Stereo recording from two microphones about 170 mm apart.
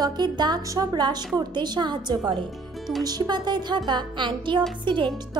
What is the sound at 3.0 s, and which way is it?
Speech, 25° right (ahead or behind).